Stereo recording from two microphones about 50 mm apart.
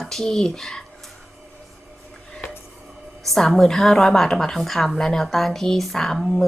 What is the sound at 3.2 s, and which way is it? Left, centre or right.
A woman's voice, centre.